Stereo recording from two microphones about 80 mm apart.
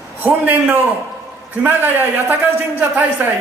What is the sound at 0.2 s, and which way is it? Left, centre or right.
A man's voice, right.